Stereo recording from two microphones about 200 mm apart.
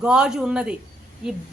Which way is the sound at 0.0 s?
5° right (ahead or behind).